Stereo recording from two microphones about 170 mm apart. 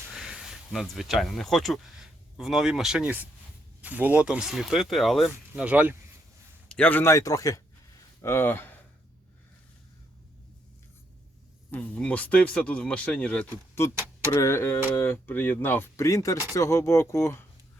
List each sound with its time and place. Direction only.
0.1 s speech: 5° right (ahead or behind)
6.7 s speech: 10° left (ahead or behind)
11.7 s speech: 10° left (ahead or behind)